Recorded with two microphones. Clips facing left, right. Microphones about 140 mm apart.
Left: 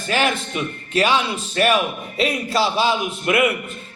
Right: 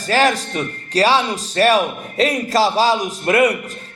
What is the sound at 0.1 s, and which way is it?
A man's voice, 40° right (ahead or behind).